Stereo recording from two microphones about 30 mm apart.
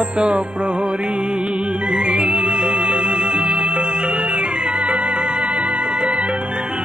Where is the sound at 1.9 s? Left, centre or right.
Right.